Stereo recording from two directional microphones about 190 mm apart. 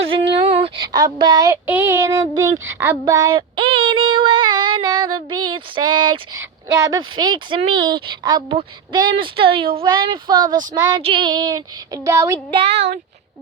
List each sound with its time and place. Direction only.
0.1 s child singing: 30° right (ahead or behind)
6.7 s a woman's voice: 15° right (ahead or behind)
12.5 s a woman's voice: 30° right (ahead or behind)